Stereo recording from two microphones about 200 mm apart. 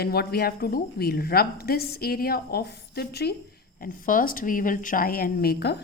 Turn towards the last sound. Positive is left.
turn(degrees=50)  # may be behind; listen again after turning